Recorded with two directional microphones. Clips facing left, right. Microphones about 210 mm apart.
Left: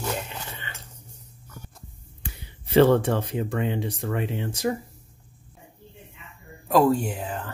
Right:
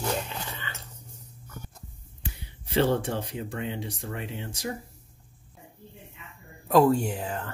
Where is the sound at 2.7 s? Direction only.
65° left (ahead or behind).